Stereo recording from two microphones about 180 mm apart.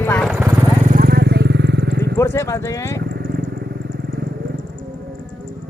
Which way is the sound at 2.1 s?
15° left (ahead or behind).